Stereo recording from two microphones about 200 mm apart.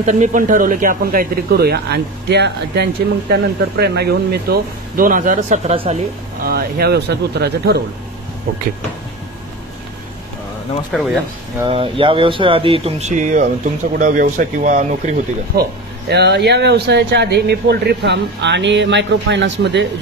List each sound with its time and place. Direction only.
0.0 s speech: 40° right (ahead or behind)
6.4 s speech: 50° right (ahead or behind)
10.9 s speech: 5° left (ahead or behind)
11.6 s speech: 25° right (ahead or behind)
16.1 s speech: 55° right (ahead or behind)